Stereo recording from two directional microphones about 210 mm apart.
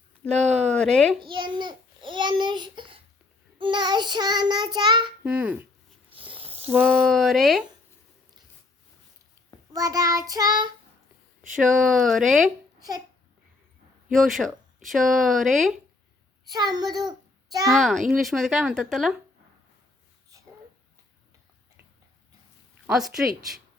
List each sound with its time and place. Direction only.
0.3 s speech: 30° right (ahead or behind)
0.7 s speech: 5° left (ahead or behind)
1.3 s babbling: 20° right (ahead or behind)
3.6 s child singing: 20° right (ahead or behind)
5.2 s child singing: 5° right (ahead or behind)
6.1 s a sound: 25° right (ahead or behind)
6.7 s child singing: 10° right (ahead or behind)
7.0 s speech: centre (ahead or behind)
9.7 s child singing: 15° right (ahead or behind)
11.5 s speech: centre (ahead or behind)
14.1 s speech: centre (ahead or behind)
16.5 s child singing: 20° right (ahead or behind)
17.7 s speech: centre (ahead or behind)
22.9 s speech: centre (ahead or behind)